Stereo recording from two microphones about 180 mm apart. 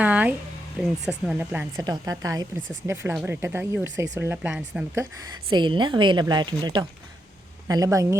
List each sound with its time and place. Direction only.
0.0 s a sound: 10° right (ahead or behind)
1.3 s speech: 5° right (ahead or behind)
1.7 s a woman's voice: 20° right (ahead or behind)
3.8 s speech: 90° right
4.1 s speech: 10° right (ahead or behind)
5.5 s a woman's voice: 25° right (ahead or behind)